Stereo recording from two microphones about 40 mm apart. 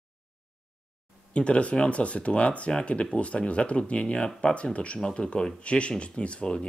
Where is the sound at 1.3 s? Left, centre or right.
Left.